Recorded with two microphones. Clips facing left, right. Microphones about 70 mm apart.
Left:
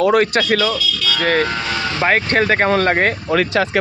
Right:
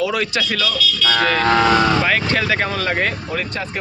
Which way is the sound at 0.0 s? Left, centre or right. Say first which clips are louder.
Left 6 dB; left.